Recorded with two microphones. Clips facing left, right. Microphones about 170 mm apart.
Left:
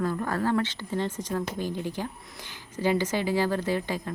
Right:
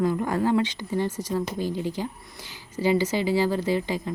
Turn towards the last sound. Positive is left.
turn(degrees=-10)  # may be behind; listen again after turning